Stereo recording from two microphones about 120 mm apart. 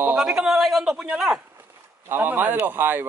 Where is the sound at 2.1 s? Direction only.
15° right (ahead or behind).